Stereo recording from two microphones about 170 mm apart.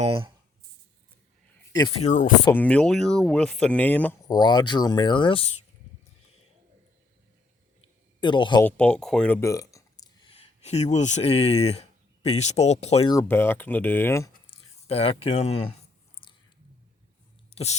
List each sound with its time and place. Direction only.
0.0 s speech: 30° right (ahead or behind)
2.0 s speech: 45° left (ahead or behind)
2.5 s speech: 10° left (ahead or behind)
4.3 s speech: 25° left (ahead or behind)
8.2 s speech: 25° left (ahead or behind)
8.6 s speech: 5° left (ahead or behind)
10.2 s a sound: 35° left (ahead or behind)
10.9 s speech: 45° left (ahead or behind)
13.2 s speech: 15° left (ahead or behind)
14.8 s speech: 35° left (ahead or behind)
16.2 s a sound: 30° left (ahead or behind)
17.5 s a sound: 40° left (ahead or behind)